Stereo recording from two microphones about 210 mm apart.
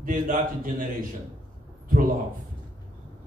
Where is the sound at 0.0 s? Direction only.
40° right (ahead or behind).